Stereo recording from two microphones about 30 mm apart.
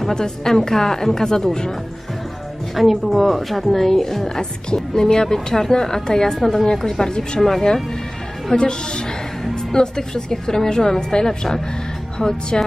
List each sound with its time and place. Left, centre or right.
0.1 s a woman's voice: left
2.7 s a woman's voice: centre
4.4 s a woman's voice: left
6.3 s a woman's voice: centre
8.5 s a woman's voice: left